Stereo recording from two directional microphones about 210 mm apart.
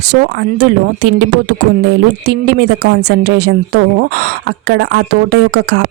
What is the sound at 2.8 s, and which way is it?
Speech, 50° right (ahead or behind).